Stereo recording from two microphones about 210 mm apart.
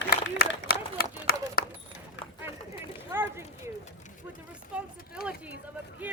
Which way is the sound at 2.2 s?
60° left (ahead or behind).